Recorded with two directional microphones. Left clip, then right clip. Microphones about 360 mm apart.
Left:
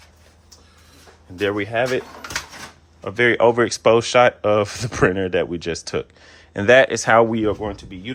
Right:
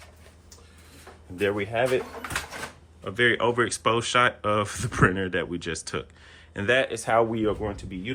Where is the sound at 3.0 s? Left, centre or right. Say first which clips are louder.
Left 7 dB; centre.